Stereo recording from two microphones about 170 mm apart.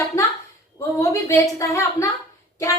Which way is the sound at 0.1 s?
15° left (ahead or behind).